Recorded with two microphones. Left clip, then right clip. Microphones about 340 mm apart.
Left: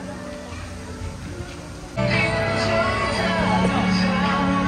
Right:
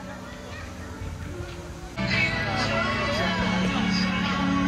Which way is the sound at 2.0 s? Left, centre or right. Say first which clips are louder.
Left 4 dB; centre.